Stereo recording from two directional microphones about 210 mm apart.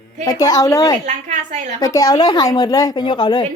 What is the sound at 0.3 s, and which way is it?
Speech, 20° left (ahead or behind).